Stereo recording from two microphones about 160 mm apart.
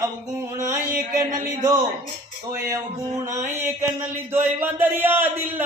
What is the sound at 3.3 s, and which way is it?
A man's voice, 15° right (ahead or behind).